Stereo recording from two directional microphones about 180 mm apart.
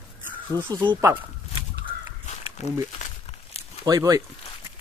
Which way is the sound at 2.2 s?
40° left (ahead or behind).